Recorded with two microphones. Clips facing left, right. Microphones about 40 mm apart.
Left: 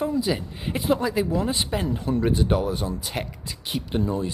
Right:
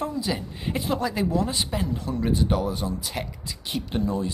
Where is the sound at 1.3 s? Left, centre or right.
Centre.